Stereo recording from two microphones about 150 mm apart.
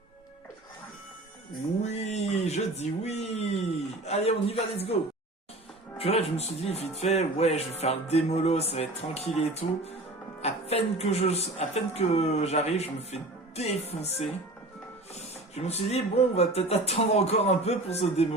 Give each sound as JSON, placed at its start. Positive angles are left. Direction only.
{"t": 1.8, "sound": "speech", "side_deg": 45}
{"t": 6.0, "sound": "speech", "side_deg": 40}
{"t": 15.5, "sound": "speech", "side_deg": 45}